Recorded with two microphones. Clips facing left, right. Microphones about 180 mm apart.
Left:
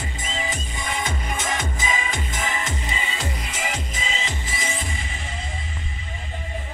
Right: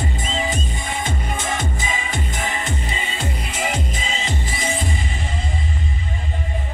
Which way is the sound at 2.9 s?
30° right (ahead or behind).